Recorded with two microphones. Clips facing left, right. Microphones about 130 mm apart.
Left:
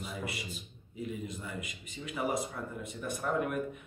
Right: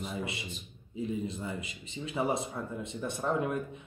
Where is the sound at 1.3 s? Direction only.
30° right (ahead or behind).